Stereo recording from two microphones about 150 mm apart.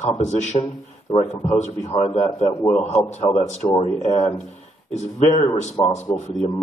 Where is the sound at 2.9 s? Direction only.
50° left (ahead or behind).